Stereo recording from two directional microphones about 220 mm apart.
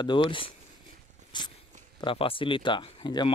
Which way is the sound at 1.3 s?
20° left (ahead or behind).